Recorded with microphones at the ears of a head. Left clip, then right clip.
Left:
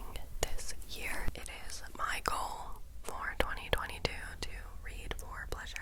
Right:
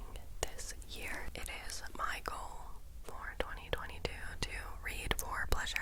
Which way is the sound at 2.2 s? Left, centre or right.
Left.